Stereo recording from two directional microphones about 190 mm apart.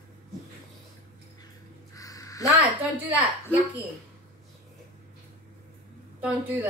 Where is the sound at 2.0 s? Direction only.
20° left (ahead or behind).